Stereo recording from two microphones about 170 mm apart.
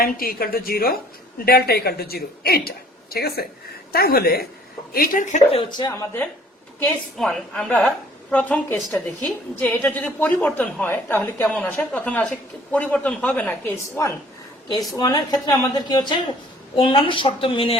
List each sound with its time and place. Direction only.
0.0 s a woman's voice: 60° left (ahead or behind); by 6.1 s 25° left (ahead or behind)
6.7 s a woman's voice: 5° left (ahead or behind); by 17.7 s 35° left (ahead or behind)